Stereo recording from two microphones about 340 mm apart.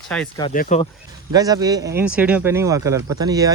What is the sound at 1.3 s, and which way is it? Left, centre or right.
Speech, centre.